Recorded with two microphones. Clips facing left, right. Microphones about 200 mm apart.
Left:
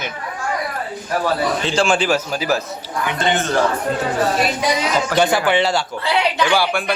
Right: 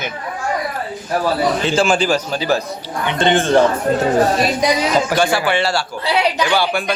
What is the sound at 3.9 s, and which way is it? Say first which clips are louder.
Speech: right 5 dB; 45° right (ahead or behind).